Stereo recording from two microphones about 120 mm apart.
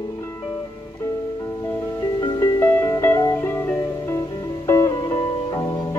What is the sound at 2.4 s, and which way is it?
Music, 20° left (ahead or behind).